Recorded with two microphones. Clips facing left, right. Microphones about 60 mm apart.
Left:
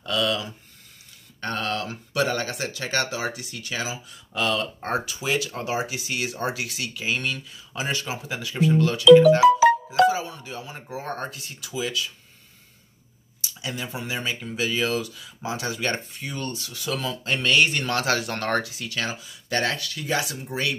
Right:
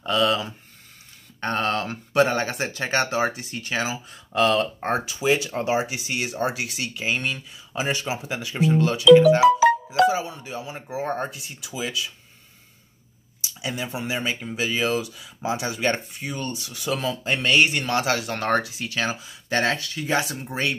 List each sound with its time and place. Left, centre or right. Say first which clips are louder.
0.0 s a sound: right 3 dB; right
1.4 s speech: right 4 dB; right; by 12.1 s centre
13.6 s speech: right 3 dB; centre
18.4 s speech: right 2 dB; right